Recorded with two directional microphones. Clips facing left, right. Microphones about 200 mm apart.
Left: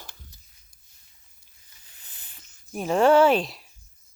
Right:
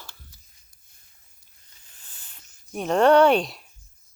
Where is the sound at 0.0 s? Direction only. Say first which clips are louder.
Even; 15° left (ahead or behind).